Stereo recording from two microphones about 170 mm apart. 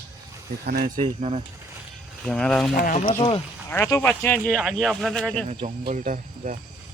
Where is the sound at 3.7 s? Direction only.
15° left (ahead or behind).